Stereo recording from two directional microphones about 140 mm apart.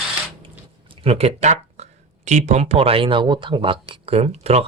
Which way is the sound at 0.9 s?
45° right (ahead or behind).